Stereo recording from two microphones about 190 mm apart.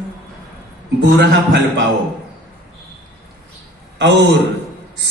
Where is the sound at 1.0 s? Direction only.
60° right (ahead or behind).